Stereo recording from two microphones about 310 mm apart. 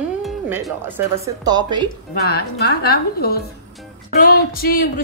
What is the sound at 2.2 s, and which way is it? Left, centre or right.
A woman's voice, left.